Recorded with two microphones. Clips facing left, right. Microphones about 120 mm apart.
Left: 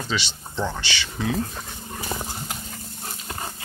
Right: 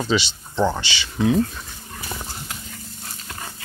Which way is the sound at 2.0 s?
30° left (ahead or behind).